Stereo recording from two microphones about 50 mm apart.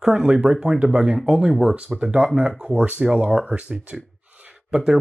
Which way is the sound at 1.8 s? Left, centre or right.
Centre.